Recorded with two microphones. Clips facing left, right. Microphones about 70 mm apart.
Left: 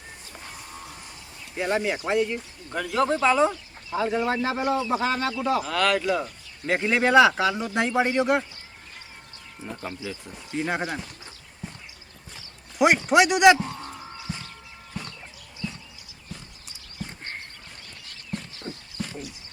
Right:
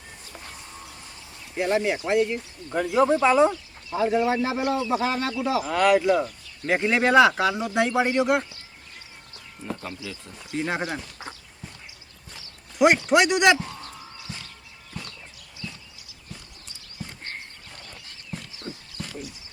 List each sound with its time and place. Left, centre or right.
1.6 s speech: centre
2.7 s speech: centre
5.7 s speech: centre
9.6 s speech: centre
13.1 s speech: centre
13.6 s fowl: centre
18.6 s a sound: left